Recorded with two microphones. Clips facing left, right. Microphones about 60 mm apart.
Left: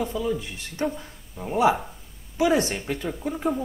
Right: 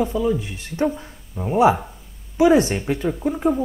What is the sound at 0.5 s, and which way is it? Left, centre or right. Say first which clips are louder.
Speech: right 6 dB; right.